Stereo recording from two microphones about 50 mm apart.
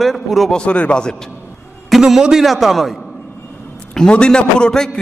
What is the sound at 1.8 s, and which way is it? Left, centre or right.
A man's voice, centre.